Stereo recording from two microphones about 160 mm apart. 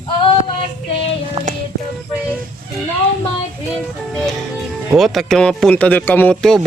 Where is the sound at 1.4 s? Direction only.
40° right (ahead or behind).